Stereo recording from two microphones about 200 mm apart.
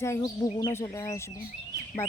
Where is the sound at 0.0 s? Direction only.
15° left (ahead or behind).